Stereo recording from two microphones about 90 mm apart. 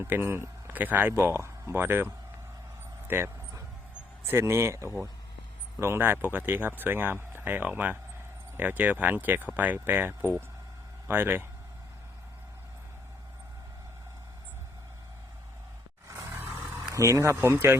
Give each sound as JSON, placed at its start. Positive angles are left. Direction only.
{"t": 0.0, "sound": "speech", "side_deg": -25}
{"t": 3.1, "sound": "a sound", "side_deg": -25}
{"t": 4.3, "sound": "speech", "side_deg": -30}
{"t": 16.0, "sound": "roar", "side_deg": -30}
{"t": 17.1, "sound": "speech", "side_deg": -35}